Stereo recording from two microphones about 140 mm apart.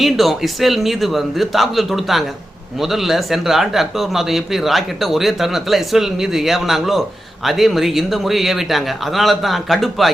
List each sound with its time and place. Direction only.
0.0 s speech: centre (ahead or behind)